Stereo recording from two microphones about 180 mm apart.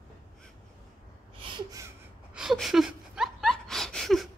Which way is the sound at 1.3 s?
25° right (ahead or behind).